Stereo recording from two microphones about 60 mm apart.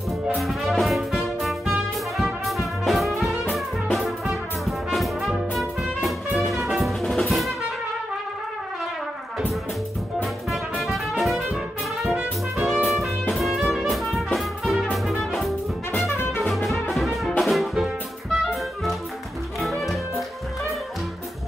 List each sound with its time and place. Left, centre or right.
0.4 s music: centre
2.1 s brass instrument: centre
3.5 s music: centre
10.2 s brass instrument: centre
12.6 s music: centre